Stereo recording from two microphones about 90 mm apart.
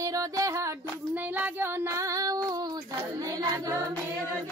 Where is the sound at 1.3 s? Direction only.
20° right (ahead or behind).